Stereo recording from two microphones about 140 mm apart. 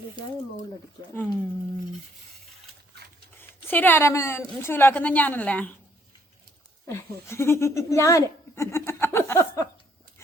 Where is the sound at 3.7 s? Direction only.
15° left (ahead or behind).